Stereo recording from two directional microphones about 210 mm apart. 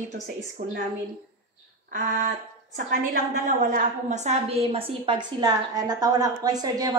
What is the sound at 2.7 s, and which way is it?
A woman's voice, 40° right (ahead or behind).